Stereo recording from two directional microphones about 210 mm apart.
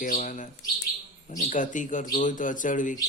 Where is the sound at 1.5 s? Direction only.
35° left (ahead or behind).